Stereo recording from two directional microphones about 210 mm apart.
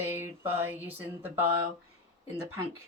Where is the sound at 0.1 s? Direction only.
10° right (ahead or behind).